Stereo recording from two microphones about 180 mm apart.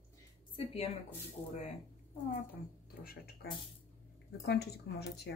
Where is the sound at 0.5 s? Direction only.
35° left (ahead or behind).